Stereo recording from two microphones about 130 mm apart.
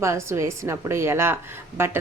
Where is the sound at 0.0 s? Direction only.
20° right (ahead or behind).